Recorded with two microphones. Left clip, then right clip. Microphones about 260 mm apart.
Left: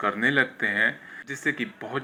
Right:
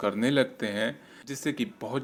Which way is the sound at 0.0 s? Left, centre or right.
Right.